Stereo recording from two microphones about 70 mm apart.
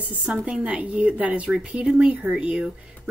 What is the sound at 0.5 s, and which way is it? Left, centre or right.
Speech, centre.